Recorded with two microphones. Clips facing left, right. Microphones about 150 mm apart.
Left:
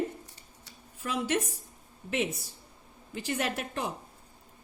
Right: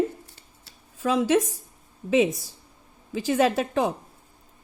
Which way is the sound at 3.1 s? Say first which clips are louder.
Right 10 dB; 90° right.